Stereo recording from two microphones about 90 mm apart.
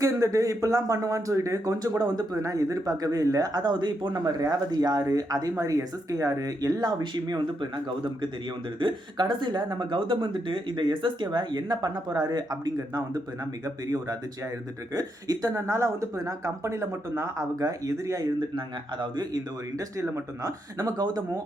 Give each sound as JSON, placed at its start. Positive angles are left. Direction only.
{"t": 0.0, "sound": "speech", "side_deg": -35}
{"t": 8.8, "sound": "speech", "side_deg": -55}
{"t": 15.6, "sound": "speech", "side_deg": -30}
{"t": 18.3, "sound": "speech", "side_deg": -60}
{"t": 20.0, "sound": "speech", "side_deg": -30}